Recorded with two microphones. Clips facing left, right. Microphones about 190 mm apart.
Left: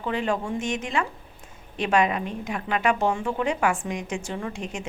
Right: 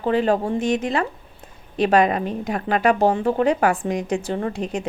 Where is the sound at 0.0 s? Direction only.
35° right (ahead or behind).